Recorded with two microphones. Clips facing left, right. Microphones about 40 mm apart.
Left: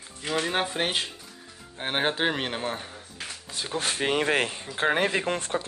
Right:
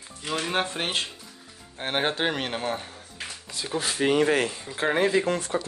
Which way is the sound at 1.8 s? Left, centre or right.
Centre.